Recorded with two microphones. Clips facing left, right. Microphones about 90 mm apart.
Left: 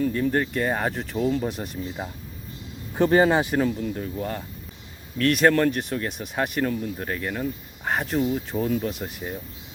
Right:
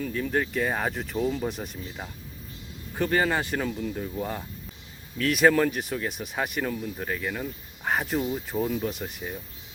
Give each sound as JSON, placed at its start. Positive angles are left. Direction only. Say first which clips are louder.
{"t": 0.0, "sound": "speech", "louder": "left 4 dB", "side_deg": 0}
{"t": 2.9, "sound": "speech", "louder": "left 6 dB", "side_deg": 25}
{"t": 3.5, "sound": "speech", "louder": "left 5 dB", "side_deg": 5}